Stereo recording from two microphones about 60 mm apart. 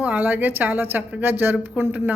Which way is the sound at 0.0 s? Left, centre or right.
Right.